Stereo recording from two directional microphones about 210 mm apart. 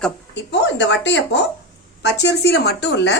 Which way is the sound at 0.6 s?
55° left (ahead or behind).